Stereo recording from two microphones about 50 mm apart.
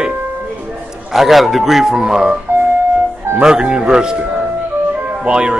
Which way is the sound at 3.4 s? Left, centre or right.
Centre.